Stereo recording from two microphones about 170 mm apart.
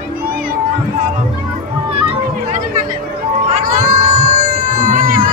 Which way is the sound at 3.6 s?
55° right (ahead or behind).